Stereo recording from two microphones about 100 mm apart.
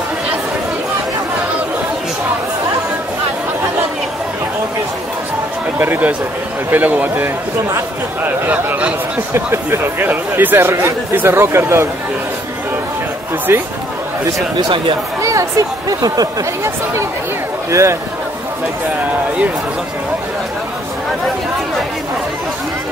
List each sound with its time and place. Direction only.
5.8 s speech: 20° right (ahead or behind)
13.5 s speech: 25° right (ahead or behind)
14.6 s speech: 55° right (ahead or behind)
15.2 s a man's voice: 35° right (ahead or behind)